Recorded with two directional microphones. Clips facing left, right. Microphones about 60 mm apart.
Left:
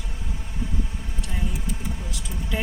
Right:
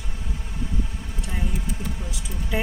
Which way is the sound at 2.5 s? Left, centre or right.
Centre.